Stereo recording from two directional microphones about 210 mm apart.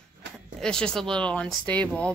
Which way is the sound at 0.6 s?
5° left (ahead or behind).